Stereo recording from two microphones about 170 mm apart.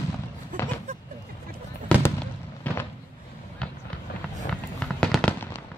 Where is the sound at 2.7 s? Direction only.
10° left (ahead or behind).